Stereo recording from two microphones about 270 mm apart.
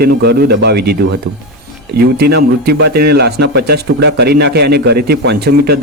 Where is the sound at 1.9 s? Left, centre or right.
Right.